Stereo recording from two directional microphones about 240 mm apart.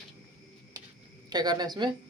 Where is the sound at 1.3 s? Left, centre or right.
Centre.